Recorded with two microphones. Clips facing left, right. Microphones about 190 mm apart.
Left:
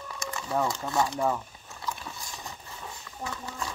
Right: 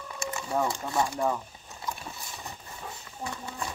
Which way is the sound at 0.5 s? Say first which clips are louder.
Left 1 dB; 15° right (ahead or behind).